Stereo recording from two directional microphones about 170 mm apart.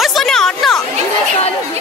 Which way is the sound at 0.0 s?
Centre (ahead or behind).